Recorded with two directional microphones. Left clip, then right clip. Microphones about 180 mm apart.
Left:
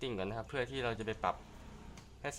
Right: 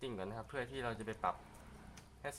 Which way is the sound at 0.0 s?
30° left (ahead or behind).